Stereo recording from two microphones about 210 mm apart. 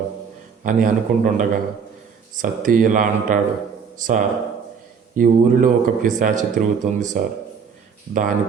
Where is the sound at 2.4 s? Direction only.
40° right (ahead or behind).